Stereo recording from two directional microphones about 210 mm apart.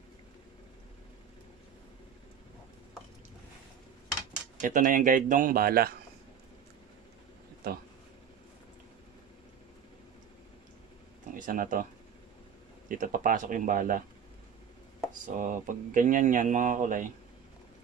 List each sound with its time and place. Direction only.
4.6 s speech: 35° right (ahead or behind)
7.6 s speech: 45° right (ahead or behind)
11.3 s speech: 40° right (ahead or behind)
12.8 s speech: 40° right (ahead or behind)
15.2 s speech: 40° right (ahead or behind)